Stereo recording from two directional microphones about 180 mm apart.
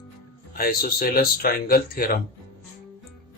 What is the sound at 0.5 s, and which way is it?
Speech, 55° left (ahead or behind).